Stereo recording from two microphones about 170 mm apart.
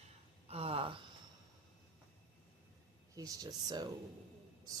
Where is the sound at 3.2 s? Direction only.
20° right (ahead or behind).